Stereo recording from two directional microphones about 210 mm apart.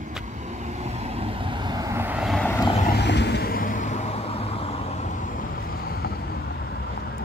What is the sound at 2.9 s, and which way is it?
Vehicle, 55° left (ahead or behind).